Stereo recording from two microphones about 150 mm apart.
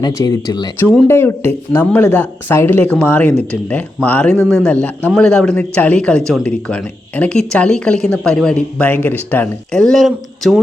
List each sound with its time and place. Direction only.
0.0 s speech: 25° left (ahead or behind)
1.0 s speech: 15° left (ahead or behind); by 10.6 s centre (ahead or behind)